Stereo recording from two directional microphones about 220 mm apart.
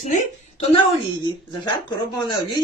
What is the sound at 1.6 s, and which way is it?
Speech, 20° left (ahead or behind).